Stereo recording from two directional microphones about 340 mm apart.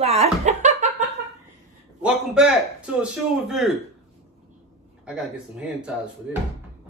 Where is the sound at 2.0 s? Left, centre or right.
Centre.